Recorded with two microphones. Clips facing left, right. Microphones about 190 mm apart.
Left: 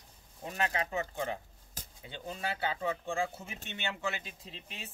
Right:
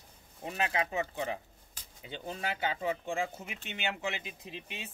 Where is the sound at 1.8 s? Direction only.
45° left (ahead or behind).